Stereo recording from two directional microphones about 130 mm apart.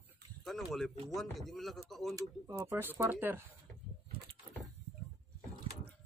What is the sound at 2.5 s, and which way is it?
Speech, 15° right (ahead or behind).